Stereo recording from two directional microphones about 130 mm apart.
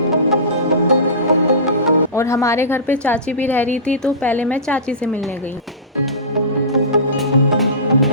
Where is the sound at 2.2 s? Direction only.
25° left (ahead or behind).